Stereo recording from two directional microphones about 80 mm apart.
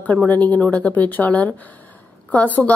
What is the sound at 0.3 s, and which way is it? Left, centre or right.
A woman's voice, centre.